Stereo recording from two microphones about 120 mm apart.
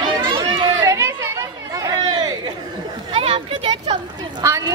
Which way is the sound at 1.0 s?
25° right (ahead or behind).